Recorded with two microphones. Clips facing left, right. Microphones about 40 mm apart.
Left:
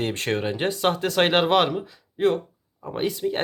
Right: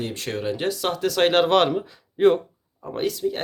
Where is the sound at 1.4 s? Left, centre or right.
Centre.